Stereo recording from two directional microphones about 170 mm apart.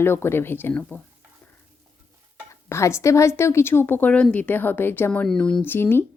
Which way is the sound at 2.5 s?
15° left (ahead or behind).